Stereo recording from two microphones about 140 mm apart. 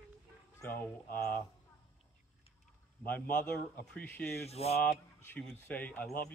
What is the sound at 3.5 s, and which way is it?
Speech, 10° left (ahead or behind).